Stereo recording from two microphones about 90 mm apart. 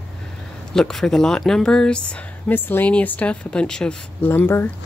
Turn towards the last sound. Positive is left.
turn(degrees=25)  # may be behind; listen again after turning